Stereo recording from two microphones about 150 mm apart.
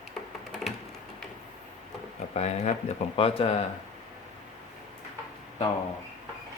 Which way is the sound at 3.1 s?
40° left (ahead or behind).